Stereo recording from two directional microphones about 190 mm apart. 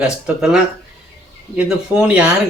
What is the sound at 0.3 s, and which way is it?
Speech, 5° right (ahead or behind).